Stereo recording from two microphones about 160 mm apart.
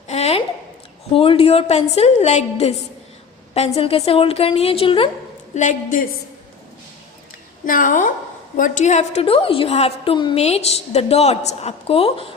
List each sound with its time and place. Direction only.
0.1 s a sound: 40° left (ahead or behind)
1.1 s a woman's voice: 35° left (ahead or behind)
3.8 s a woman's voice: 40° left (ahead or behind)
5.5 s a woman's voice: 55° left (ahead or behind)
7.6 s a woman's voice: 55° left (ahead or behind); by 12.3 s 35° left (ahead or behind)